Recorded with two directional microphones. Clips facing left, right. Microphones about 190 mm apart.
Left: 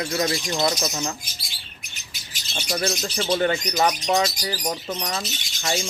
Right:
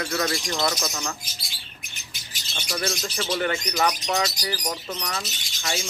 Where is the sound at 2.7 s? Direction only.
30° left (ahead or behind).